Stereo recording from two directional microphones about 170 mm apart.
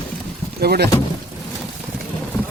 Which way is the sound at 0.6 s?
65° right (ahead or behind).